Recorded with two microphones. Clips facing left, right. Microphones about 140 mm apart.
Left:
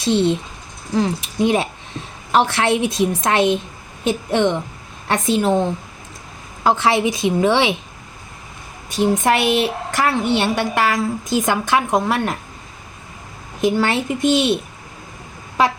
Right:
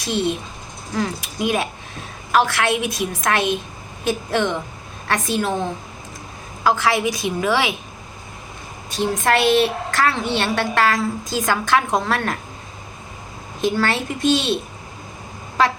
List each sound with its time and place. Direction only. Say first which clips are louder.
0.0 s a woman's voice: left 5 dB; 25° left (ahead or behind)
6.7 s a woman's voice: left 2 dB; 25° left (ahead or behind)
8.9 s a woman's voice: left 3 dB; 15° left (ahead or behind)
13.6 s a woman's voice: left 3 dB; 15° left (ahead or behind)